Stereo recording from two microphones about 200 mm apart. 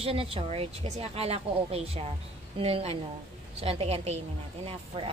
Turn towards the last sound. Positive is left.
turn(degrees=-30)  # may be behind; listen again after turning